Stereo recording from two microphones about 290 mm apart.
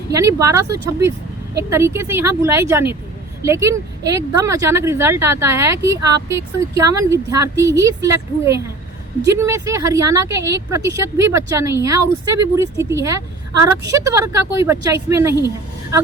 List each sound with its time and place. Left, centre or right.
0.1 s speech: centre
13.5 s a woman's voice: right
13.9 s speech: centre